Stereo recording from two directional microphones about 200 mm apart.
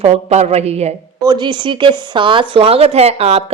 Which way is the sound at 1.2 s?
25° right (ahead or behind).